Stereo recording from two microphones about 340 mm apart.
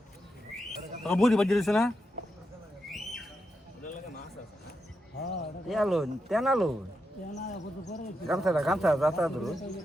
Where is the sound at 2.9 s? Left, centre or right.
Centre.